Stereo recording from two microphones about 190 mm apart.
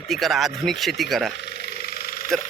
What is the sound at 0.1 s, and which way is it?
Speech, centre (ahead or behind).